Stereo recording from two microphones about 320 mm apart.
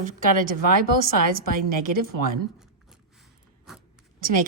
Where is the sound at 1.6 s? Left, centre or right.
Right.